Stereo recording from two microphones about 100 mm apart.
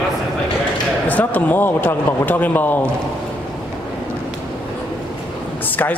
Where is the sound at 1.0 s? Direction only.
15° left (ahead or behind).